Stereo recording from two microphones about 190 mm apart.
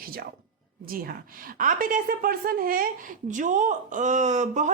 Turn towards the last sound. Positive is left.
turn(degrees=-40)  # may be behind; listen again after turning